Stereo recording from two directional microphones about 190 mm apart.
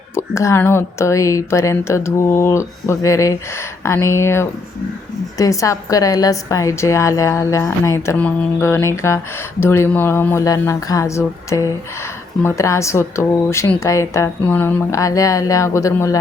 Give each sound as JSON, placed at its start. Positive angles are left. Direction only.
{"t": 0.1, "sound": "a woman's voice", "side_deg": 15}